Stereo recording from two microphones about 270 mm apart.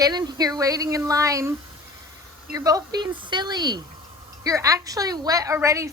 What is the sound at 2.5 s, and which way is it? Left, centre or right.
A woman's voice, centre.